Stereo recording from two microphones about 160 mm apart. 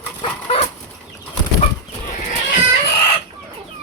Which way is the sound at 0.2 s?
40° left (ahead or behind).